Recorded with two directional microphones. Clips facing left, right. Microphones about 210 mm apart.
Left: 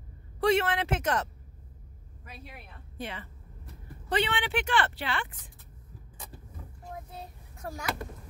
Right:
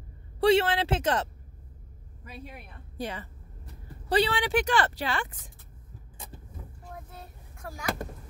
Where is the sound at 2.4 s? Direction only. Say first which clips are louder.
Right 3 dB; 40° right (ahead or behind).